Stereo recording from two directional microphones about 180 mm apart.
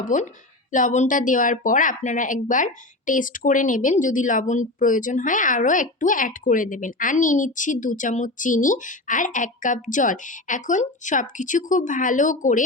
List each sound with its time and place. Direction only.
0.0 s speech: 45° left (ahead or behind)